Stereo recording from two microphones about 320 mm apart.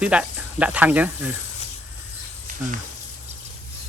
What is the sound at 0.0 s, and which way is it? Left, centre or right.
Speech, centre.